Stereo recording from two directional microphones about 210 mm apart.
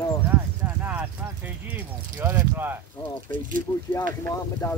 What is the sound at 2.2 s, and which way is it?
Speech, 10° right (ahead or behind).